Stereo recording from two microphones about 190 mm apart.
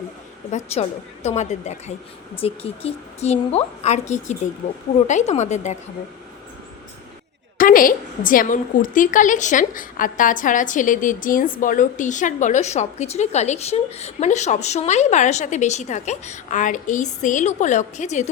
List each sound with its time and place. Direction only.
0.5 s a woman's voice: 35° left (ahead or behind)
7.6 s a woman's voice: 45° left (ahead or behind)